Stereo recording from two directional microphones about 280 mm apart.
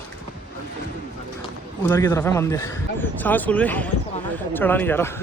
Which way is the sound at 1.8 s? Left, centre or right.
Centre.